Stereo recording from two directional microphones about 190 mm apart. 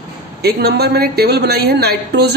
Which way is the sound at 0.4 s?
55° right (ahead or behind).